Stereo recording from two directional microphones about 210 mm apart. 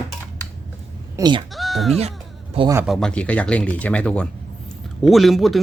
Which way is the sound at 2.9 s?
5° left (ahead or behind).